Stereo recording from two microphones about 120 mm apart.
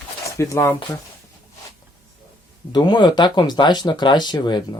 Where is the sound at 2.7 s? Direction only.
40° left (ahead or behind).